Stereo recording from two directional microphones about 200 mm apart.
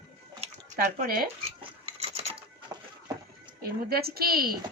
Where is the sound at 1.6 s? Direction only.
30° right (ahead or behind).